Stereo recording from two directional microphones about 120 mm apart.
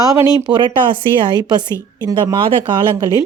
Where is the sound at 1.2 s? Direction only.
35° right (ahead or behind).